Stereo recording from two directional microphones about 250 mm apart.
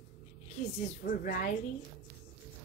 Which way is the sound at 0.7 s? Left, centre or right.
Left.